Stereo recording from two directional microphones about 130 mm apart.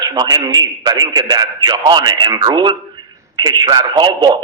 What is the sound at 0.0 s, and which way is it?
A man's voice, 30° right (ahead or behind).